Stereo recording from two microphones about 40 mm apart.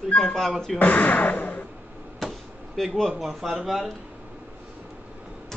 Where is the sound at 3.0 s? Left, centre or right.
Centre.